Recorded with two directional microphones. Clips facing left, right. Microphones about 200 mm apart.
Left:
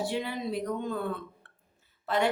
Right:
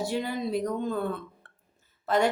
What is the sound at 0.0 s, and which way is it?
Speech, 40° right (ahead or behind).